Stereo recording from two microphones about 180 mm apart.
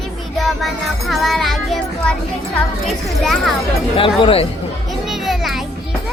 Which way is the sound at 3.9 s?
30° left (ahead or behind).